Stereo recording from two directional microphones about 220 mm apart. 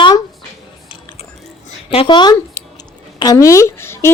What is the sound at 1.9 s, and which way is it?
A woman's voice, 25° left (ahead or behind).